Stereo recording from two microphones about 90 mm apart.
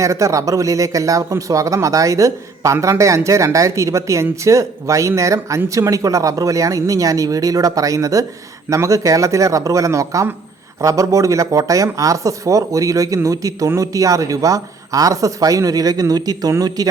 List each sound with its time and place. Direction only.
0.0 s speech: 35° right (ahead or behind)
2.7 s a man's voice: 25° right (ahead or behind)
3.0 s speech: 35° right (ahead or behind)